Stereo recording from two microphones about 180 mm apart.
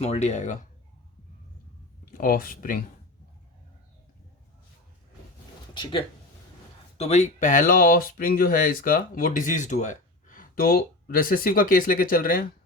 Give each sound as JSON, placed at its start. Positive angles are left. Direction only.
{"t": 0.0, "sound": "speech", "side_deg": 35}
{"t": 2.0, "sound": "speech", "side_deg": 55}
{"t": 5.7, "sound": "speech", "side_deg": 30}